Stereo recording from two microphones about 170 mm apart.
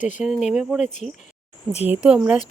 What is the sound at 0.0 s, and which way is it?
Speech, 45° left (ahead or behind).